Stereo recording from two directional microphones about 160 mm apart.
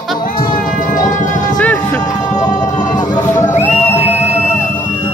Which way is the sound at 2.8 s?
25° left (ahead or behind).